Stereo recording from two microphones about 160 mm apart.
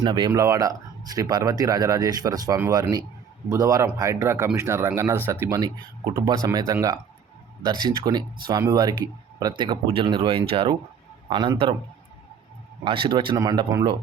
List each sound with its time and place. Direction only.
0.0 s speech: 25° right (ahead or behind)
12.8 s speech: 30° right (ahead or behind)